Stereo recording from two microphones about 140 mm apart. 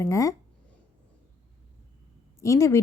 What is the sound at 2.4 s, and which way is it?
Speech, 20° left (ahead or behind).